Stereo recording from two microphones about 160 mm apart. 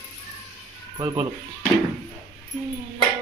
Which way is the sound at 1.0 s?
25° right (ahead or behind).